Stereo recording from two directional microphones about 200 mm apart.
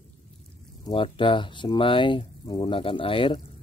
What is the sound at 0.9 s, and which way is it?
A man's voice, 25° left (ahead or behind).